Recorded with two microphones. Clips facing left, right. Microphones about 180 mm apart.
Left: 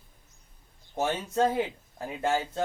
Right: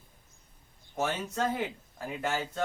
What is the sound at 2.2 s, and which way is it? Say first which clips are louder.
Speech: left 5 dB; 25° left (ahead or behind).